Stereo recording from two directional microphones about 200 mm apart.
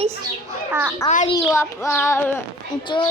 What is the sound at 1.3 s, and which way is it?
A child's voice, 15° left (ahead or behind).